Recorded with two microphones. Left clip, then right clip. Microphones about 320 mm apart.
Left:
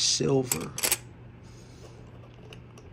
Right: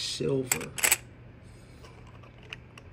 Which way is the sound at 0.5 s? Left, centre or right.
Centre.